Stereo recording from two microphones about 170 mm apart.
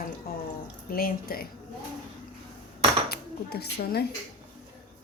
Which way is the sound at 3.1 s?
65° left (ahead or behind).